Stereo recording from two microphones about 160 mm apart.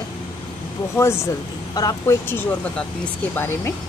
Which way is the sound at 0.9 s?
15° left (ahead or behind).